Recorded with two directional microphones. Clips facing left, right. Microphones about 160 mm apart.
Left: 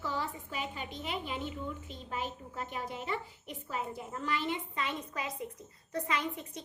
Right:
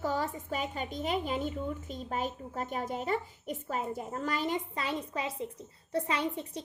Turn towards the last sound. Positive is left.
turn(degrees=-30)  # may be behind; listen again after turning